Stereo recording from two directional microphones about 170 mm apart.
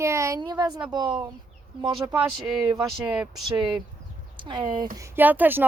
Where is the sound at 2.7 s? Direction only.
5° right (ahead or behind).